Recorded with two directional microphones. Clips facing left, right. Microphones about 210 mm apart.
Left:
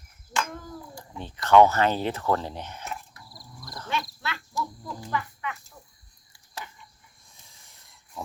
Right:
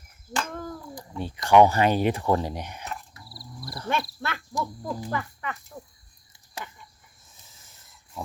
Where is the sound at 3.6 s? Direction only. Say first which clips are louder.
Right 3 dB; 10° right (ahead or behind).